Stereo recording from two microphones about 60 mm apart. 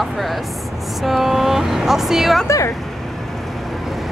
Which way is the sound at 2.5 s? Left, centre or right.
Left.